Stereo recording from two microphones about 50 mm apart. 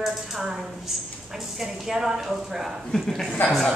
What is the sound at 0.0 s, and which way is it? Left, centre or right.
A woman's voice, centre.